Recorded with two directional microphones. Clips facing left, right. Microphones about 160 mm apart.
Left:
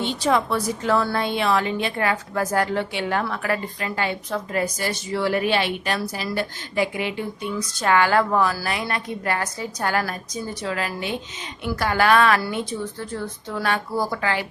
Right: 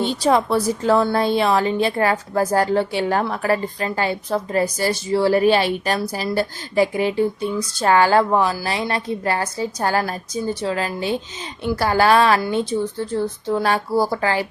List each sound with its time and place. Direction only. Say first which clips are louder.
0.0 s a woman's voice: right 4 dB; 35° right (ahead or behind)